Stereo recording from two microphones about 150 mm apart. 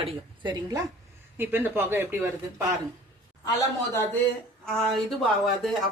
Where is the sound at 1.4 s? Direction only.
15° right (ahead or behind).